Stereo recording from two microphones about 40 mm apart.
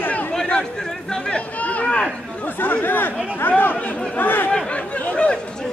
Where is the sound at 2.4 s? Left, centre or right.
Left.